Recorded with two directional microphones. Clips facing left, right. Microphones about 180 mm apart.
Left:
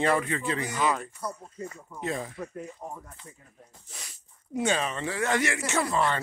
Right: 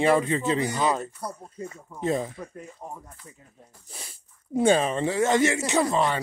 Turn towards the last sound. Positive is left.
turn(degrees=-20)  # may be behind; listen again after turning